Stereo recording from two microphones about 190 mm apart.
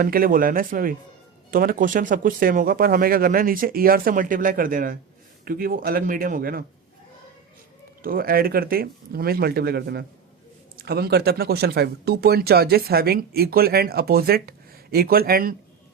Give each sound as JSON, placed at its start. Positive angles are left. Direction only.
{"t": 0.0, "sound": "speech", "side_deg": -50}
{"t": 8.0, "sound": "speech", "side_deg": -50}